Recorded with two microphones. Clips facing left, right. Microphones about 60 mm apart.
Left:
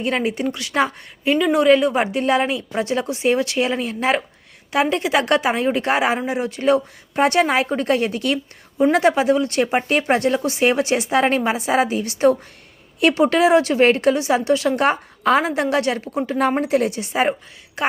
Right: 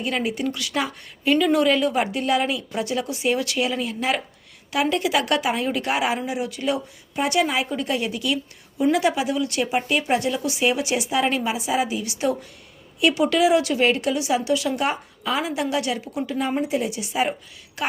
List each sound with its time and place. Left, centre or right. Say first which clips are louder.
0.0 s speech: left 4 dB; left
1.3 s speech: left 4 dB; left
16.4 s a woman's voice: left 6 dB; left